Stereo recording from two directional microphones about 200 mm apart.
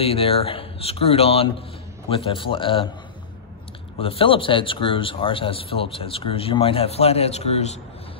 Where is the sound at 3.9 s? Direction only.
30° left (ahead or behind).